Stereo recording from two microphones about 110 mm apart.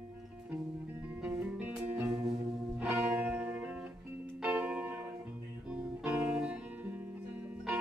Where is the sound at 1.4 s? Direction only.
10° right (ahead or behind).